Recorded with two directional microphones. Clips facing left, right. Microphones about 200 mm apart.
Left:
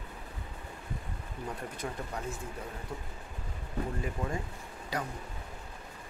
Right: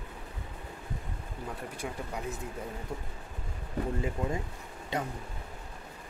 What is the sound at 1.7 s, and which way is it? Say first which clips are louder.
Speech: right 1 dB; 10° right (ahead or behind).